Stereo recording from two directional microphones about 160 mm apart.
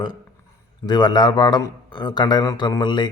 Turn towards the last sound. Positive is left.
turn(degrees=30)  # may be behind; listen again after turning